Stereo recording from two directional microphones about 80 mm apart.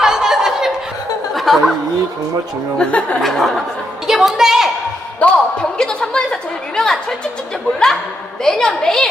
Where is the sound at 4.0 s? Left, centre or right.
Centre.